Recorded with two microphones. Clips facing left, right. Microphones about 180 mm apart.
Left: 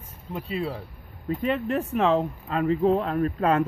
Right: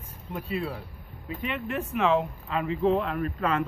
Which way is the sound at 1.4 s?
35° left (ahead or behind).